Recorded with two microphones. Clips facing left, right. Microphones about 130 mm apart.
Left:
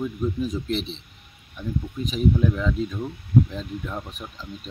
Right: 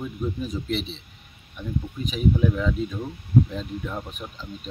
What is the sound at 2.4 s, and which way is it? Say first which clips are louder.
Speech: even; 5° right (ahead or behind).